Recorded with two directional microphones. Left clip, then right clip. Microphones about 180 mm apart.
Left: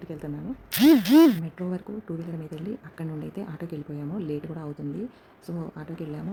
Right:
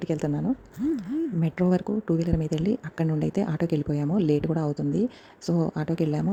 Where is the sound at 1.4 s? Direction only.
45° right (ahead or behind).